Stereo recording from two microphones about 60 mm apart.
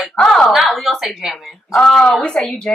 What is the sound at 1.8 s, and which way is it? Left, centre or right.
Speech, centre.